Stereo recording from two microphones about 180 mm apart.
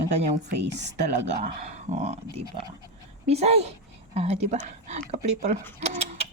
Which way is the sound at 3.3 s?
35° right (ahead or behind).